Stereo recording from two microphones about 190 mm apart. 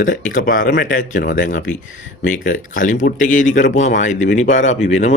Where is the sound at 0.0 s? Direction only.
45° left (ahead or behind).